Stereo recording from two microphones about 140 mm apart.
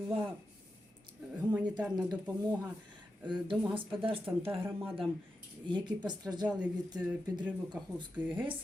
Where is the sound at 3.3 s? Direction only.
35° right (ahead or behind).